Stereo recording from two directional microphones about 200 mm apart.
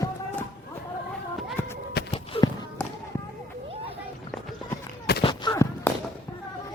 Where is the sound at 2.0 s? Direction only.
55° left (ahead or behind).